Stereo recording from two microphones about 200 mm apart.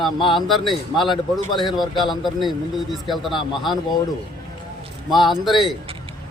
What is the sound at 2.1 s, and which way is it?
Speech, centre (ahead or behind).